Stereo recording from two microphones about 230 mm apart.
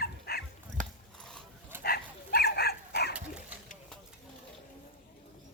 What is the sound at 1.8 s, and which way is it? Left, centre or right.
Dog, left.